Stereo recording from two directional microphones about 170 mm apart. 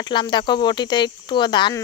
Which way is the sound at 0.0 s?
25° left (ahead or behind).